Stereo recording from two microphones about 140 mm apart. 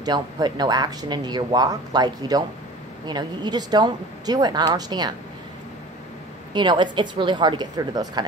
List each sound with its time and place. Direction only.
0.0 s speech: 30° right (ahead or behind)
6.5 s a woman's voice: 35° right (ahead or behind)